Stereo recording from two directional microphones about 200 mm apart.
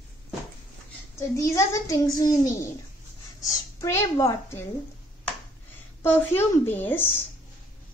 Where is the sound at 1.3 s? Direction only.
15° left (ahead or behind).